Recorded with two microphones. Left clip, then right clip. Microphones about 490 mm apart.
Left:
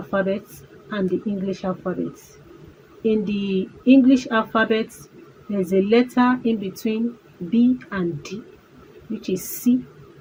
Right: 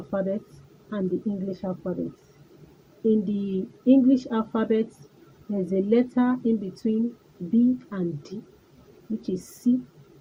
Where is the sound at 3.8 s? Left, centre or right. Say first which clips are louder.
Left 4 dB; right.